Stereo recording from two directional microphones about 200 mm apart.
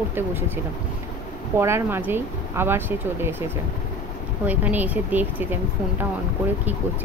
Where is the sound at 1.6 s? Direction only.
10° right (ahead or behind).